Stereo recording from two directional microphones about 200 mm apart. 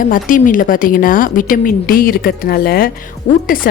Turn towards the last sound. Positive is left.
turn(degrees=35)  # may be behind; listen again after turning